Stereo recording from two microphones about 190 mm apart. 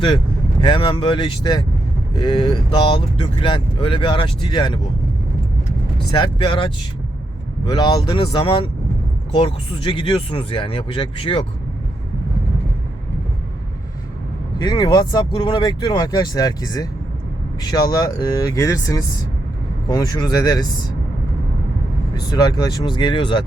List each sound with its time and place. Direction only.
0.6 s speech: 25° left (ahead or behind)
6.1 s speech: 25° left (ahead or behind)
14.6 s speech: 25° left (ahead or behind)
22.1 s speech: 20° left (ahead or behind)